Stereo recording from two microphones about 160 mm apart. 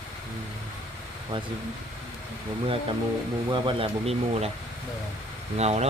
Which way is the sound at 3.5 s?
35° right (ahead or behind).